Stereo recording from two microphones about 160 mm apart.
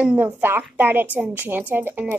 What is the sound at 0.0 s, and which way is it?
A woman's voice, 10° right (ahead or behind).